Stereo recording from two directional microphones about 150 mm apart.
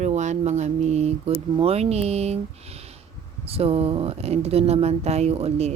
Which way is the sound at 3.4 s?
40° right (ahead or behind).